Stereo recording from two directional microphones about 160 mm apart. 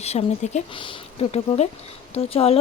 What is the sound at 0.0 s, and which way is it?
Speech, 40° left (ahead or behind).